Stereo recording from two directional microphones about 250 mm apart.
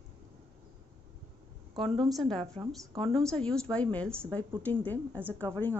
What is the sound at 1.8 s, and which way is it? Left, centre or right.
A woman's voice, centre.